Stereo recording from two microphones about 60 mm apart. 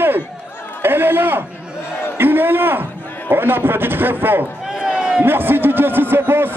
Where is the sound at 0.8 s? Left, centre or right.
Right.